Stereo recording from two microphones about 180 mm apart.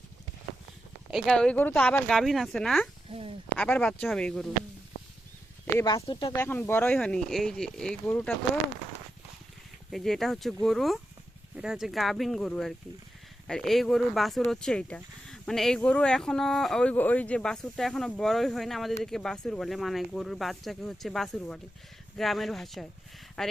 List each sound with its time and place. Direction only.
1.1 s speech: centre (ahead or behind)
3.1 s speech: 30° right (ahead or behind)
3.6 s speech: 5° left (ahead or behind)
5.8 s speech: 25° left (ahead or behind)
6.4 s speech: 10° left (ahead or behind)
9.9 s speech: centre (ahead or behind)